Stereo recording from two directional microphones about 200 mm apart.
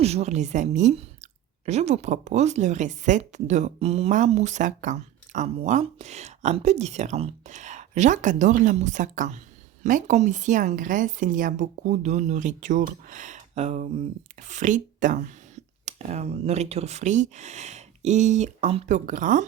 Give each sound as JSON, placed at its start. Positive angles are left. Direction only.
{"t": 0.0, "sound": "speech", "side_deg": -30}